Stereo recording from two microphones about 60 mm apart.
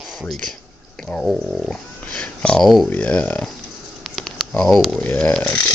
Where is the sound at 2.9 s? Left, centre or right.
Left.